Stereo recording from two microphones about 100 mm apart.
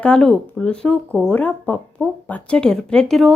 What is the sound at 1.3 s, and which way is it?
A woman's voice, 15° left (ahead or behind).